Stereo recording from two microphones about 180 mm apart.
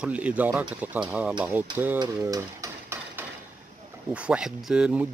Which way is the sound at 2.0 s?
20° right (ahead or behind).